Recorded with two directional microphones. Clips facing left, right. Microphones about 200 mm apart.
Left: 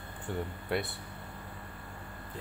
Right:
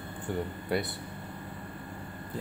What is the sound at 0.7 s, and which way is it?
Speech, centre (ahead or behind).